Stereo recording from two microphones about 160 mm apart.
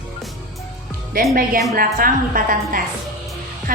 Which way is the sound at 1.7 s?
60° right (ahead or behind).